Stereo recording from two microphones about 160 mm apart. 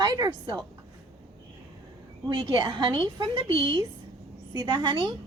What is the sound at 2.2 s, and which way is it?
A woman's voice, 30° right (ahead or behind).